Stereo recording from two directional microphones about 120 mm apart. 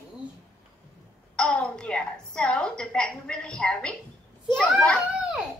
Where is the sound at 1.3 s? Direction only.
10° left (ahead or behind).